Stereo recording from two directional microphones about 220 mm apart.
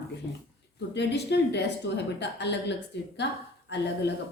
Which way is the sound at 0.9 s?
50° left (ahead or behind).